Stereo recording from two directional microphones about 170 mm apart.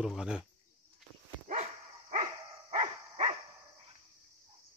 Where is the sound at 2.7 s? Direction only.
40° right (ahead or behind).